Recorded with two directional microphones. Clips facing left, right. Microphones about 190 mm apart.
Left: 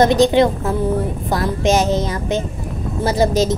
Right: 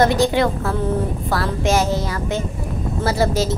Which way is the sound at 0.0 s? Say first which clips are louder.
Left 4 dB; 20° left (ahead or behind).